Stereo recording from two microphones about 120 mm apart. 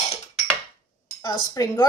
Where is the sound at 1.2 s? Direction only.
35° left (ahead or behind).